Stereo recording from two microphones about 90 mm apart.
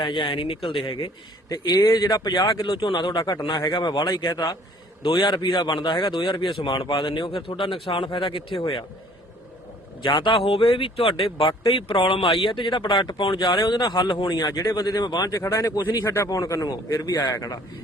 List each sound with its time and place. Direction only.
0.0 s speech: 65° left (ahead or behind); by 0.9 s 90° left
1.0 s speech: 50° left (ahead or behind)
2.6 s speech: 70° left (ahead or behind); by 4.0 s 55° left (ahead or behind)
4.3 s speech: 45° left (ahead or behind)
5.2 s speech: 60° left (ahead or behind); by 7.6 s 85° left
7.7 s speech: 75° left (ahead or behind)
8.5 s speech: 90° left
10.0 s speech: 60° left (ahead or behind)
13.4 s speech: 50° left (ahead or behind)
14.4 s speech: 40° left (ahead or behind)
15.4 s speech: 30° left (ahead or behind); by 17.3 s 55° left (ahead or behind)
17.3 s speech: 40° left (ahead or behind)